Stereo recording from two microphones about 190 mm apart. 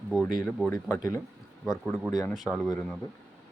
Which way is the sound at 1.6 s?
Centre (ahead or behind).